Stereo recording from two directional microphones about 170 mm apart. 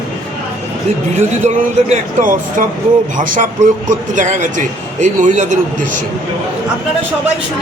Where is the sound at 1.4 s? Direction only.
50° right (ahead or behind).